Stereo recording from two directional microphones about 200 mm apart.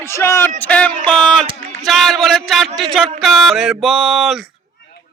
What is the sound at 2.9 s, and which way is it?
Speech, centre (ahead or behind).